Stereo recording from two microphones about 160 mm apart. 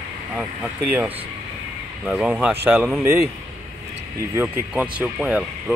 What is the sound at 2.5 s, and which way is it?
Speech, 15° right (ahead or behind).